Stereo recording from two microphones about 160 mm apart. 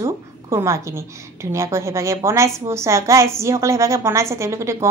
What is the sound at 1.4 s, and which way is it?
A woman's voice, 20° right (ahead or behind).